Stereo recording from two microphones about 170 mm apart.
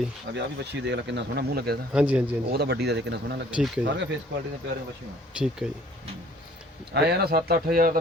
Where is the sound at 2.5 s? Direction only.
75° right (ahead or behind).